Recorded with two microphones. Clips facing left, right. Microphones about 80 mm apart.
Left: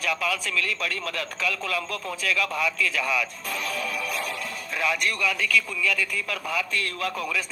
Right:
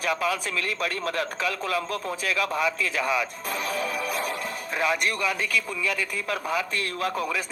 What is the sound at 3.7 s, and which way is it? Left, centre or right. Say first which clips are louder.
Music: right 2 dB; right.